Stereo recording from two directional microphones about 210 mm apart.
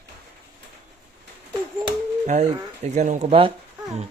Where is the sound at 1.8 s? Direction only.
30° right (ahead or behind).